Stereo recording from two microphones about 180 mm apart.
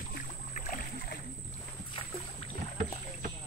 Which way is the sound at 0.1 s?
50° left (ahead or behind).